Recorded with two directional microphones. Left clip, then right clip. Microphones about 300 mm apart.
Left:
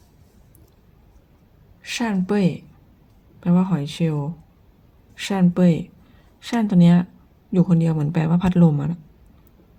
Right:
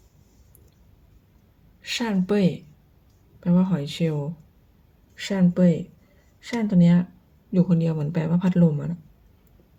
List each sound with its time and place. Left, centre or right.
1.8 s speech: centre